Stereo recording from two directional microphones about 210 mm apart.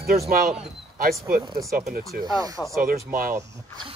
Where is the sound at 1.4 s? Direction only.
20° right (ahead or behind).